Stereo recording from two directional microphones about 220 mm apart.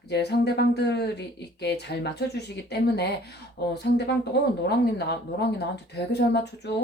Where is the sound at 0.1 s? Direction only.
50° left (ahead or behind).